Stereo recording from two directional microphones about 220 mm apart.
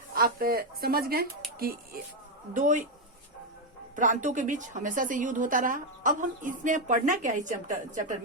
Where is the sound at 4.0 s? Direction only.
35° right (ahead or behind).